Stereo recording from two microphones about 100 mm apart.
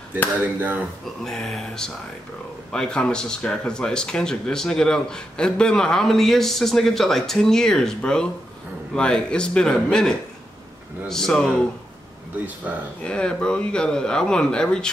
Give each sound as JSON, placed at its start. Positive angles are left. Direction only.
{"t": 0.4, "sound": "speech", "side_deg": -20}
{"t": 1.2, "sound": "speech", "side_deg": 5}
{"t": 13.0, "sound": "speech", "side_deg": 10}